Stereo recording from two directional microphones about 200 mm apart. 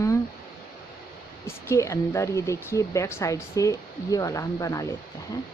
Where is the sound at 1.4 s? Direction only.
15° left (ahead or behind).